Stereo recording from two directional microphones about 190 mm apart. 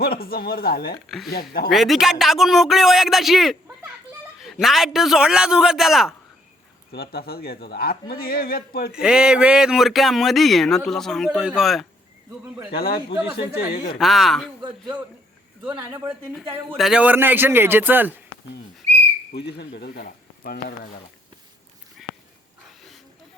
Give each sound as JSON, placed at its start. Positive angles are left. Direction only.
{"t": 0.0, "sound": "a man's voice", "side_deg": 55}
{"t": 1.0, "sound": "speech", "side_deg": 0}
{"t": 1.3, "sound": "speech", "side_deg": 55}
{"t": 1.7, "sound": "speech", "side_deg": 0}
{"t": 6.9, "sound": "a man's voice", "side_deg": 55}
{"t": 8.9, "sound": "speech", "side_deg": -5}
{"t": 12.7, "sound": "a man's voice", "side_deg": 55}
{"t": 14.0, "sound": "speech", "side_deg": 0}
{"t": 15.7, "sound": "a man's voice", "side_deg": -15}
{"t": 16.6, "sound": "a man's voice", "side_deg": 0}
{"t": 19.3, "sound": "speech", "side_deg": 60}